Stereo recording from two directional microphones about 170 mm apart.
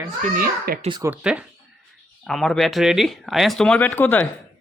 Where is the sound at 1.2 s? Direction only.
5° right (ahead or behind); by 4.3 s 10° left (ahead or behind).